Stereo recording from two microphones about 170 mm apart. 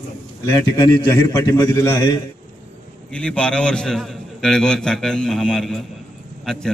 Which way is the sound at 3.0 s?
5° left (ahead or behind).